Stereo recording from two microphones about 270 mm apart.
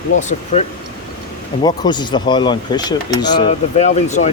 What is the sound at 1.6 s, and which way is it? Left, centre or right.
Speech, centre.